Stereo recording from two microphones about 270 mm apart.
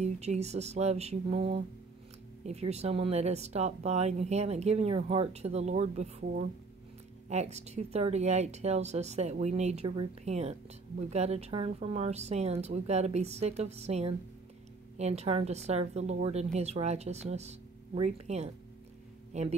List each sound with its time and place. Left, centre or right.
0.0 s speech: right